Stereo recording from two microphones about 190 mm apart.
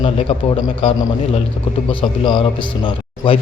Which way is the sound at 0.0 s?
25° left (ahead or behind).